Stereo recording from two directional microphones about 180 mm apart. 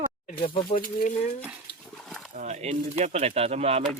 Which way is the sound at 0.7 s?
50° left (ahead or behind).